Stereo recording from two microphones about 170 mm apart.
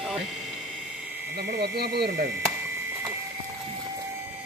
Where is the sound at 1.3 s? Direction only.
75° right (ahead or behind).